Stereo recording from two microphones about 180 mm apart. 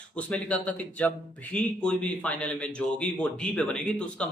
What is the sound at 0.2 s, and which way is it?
A man's voice, 5° left (ahead or behind).